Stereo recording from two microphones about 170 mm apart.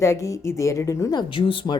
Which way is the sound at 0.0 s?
20° left (ahead or behind).